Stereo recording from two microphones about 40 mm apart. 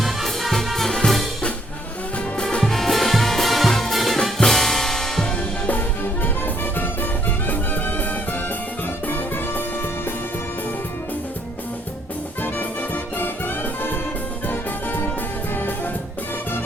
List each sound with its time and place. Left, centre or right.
0.0 s music: centre
2.4 s music: centre
6.2 s music: left
12.4 s music: left